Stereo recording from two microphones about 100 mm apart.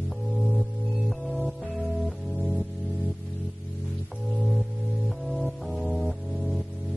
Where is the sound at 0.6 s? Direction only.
Centre (ahead or behind).